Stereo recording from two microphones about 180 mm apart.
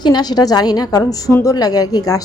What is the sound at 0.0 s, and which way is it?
A woman's voice, 25° left (ahead or behind).